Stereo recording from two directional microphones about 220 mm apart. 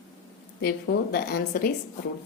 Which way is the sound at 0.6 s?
45° left (ahead or behind).